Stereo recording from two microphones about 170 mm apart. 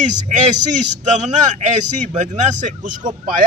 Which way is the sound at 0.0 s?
45° right (ahead or behind).